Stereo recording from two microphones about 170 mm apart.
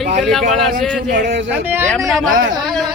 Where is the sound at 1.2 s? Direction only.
90° right.